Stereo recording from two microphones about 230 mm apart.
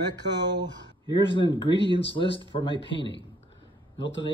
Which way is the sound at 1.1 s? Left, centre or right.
Left.